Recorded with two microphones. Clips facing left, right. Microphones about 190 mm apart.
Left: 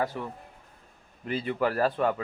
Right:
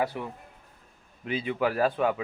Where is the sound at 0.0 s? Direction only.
10° right (ahead or behind).